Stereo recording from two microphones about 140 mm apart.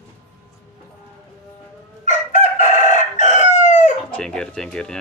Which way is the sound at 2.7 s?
60° left (ahead or behind).